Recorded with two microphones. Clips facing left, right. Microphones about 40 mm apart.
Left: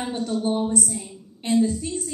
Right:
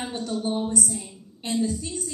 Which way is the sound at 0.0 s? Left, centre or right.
Centre.